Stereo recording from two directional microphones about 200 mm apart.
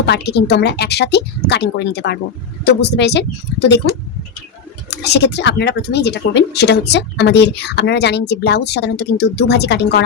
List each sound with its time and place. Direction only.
0.0 s speech: 55° left (ahead or behind)
4.9 s speech: 55° left (ahead or behind)